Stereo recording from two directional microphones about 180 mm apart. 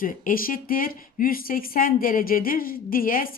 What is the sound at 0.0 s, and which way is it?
Speech, 50° left (ahead or behind).